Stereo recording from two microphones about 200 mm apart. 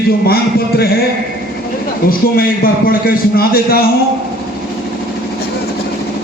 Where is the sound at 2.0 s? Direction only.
45° left (ahead or behind).